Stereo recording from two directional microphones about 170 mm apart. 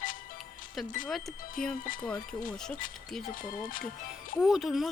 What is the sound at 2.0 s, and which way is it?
Speech, 5° left (ahead or behind).